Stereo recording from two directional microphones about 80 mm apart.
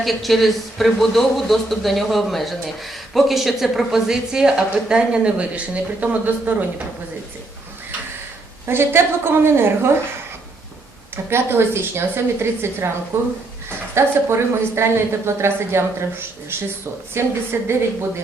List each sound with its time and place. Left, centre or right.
0.0 s a man's voice: centre
8.6 s a woman's voice: right
11.3 s a woman's voice: right